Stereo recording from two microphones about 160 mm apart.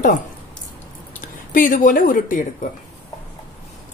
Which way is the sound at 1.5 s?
55° left (ahead or behind).